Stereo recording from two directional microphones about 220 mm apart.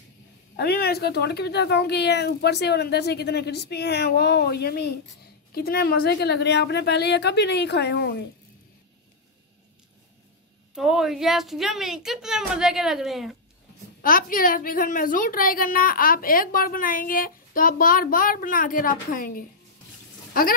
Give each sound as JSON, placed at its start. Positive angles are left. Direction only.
{"t": 0.6, "sound": "speech", "side_deg": 45}
{"t": 10.7, "sound": "a woman's voice", "side_deg": 0}
{"t": 14.0, "sound": "a woman's voice", "side_deg": 40}